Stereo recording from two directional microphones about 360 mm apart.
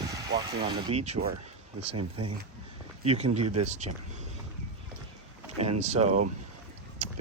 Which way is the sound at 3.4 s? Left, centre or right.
Right.